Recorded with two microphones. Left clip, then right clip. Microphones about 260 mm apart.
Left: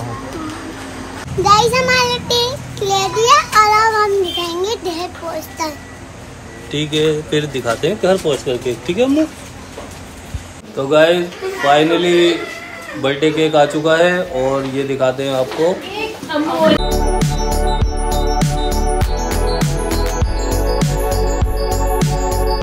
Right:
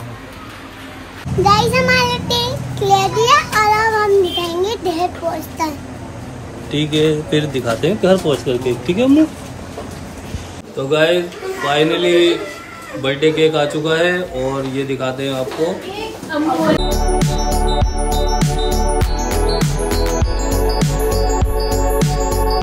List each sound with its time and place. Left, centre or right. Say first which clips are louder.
1.4 s child singing: left 1 dB; centre
5.6 s a child's voice: right 2 dB; centre
6.7 s speech: even; centre
10.8 s speech: left 3 dB; centre
16.9 s music: even; centre